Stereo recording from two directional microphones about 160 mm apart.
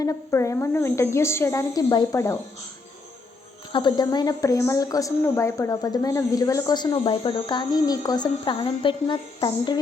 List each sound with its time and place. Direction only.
0.0 s a woman's voice: 20° left (ahead or behind)
3.7 s a woman's voice: 30° left (ahead or behind)